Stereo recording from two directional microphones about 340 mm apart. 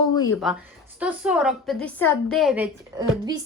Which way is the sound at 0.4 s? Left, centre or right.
Centre.